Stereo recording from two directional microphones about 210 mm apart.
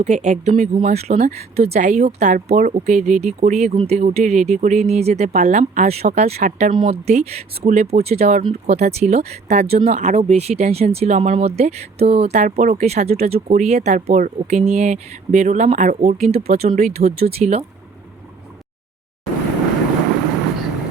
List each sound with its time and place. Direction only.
0.0 s speech: 35° right (ahead or behind)